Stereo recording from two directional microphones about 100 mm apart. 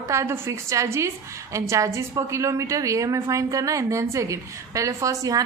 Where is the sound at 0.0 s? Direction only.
30° right (ahead or behind).